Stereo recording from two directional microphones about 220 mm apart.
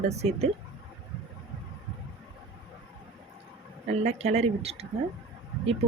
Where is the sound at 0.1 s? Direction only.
30° right (ahead or behind).